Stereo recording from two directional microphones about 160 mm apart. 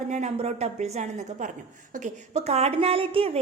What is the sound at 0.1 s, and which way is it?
A woman's voice, 45° right (ahead or behind).